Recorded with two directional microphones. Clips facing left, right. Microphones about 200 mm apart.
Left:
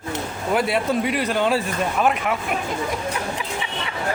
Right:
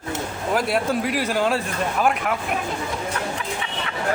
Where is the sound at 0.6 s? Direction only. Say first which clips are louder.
Left 1 dB; centre (ahead or behind).